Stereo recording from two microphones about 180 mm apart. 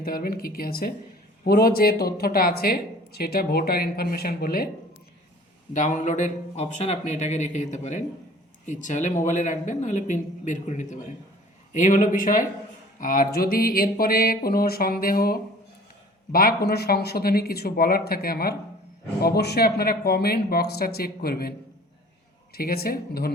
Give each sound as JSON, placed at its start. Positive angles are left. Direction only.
{"t": 0.0, "sound": "speech", "side_deg": 55}
{"t": 5.7, "sound": "speech", "side_deg": 45}
{"t": 22.5, "sound": "speech", "side_deg": 60}